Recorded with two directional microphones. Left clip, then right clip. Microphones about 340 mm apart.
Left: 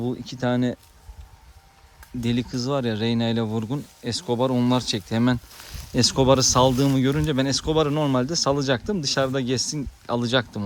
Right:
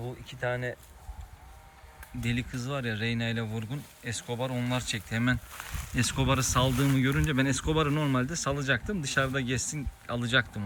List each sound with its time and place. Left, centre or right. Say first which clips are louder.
0.4 s speech: left 7 dB; centre
2.2 s speech: left 8 dB; centre